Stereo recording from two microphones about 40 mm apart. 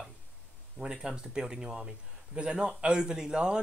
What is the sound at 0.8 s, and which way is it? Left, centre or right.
Speech, centre.